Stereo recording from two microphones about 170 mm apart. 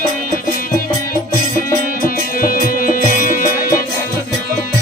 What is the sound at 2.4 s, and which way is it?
Music, 55° left (ahead or behind).